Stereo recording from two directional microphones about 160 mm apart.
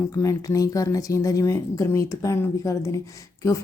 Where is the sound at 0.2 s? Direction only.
20° left (ahead or behind).